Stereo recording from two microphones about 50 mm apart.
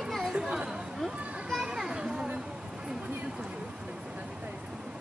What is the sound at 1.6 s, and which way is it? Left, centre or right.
Children playing, centre.